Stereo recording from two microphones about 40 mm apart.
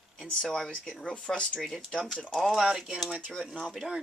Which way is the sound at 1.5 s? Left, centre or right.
Centre.